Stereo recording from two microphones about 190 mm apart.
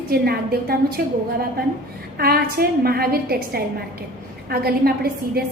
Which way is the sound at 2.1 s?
55° right (ahead or behind).